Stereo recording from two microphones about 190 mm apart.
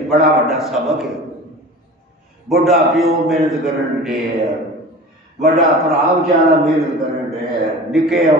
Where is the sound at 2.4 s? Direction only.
Centre (ahead or behind).